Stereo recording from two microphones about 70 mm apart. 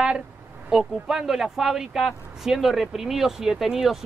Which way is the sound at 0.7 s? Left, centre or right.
Centre.